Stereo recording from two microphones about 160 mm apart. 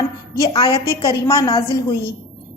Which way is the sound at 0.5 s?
30° left (ahead or behind).